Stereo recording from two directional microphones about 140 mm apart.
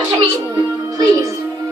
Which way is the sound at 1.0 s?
25° right (ahead or behind).